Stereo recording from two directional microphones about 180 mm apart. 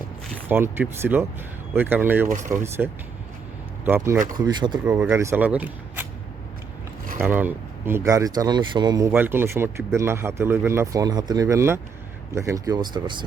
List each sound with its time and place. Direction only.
0.4 s speech: 10° right (ahead or behind)
2.3 s speech: 45° right (ahead or behind)
2.8 s speech: 5° right (ahead or behind)
4.4 s speech: 25° right (ahead or behind)
4.9 s speech: 15° right (ahead or behind)
7.2 s speech: 10° right (ahead or behind)